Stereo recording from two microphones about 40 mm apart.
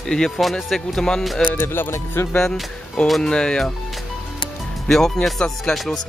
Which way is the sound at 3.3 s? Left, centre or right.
Left.